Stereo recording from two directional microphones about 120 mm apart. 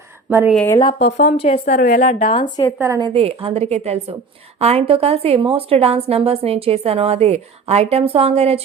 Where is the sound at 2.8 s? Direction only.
30° right (ahead or behind).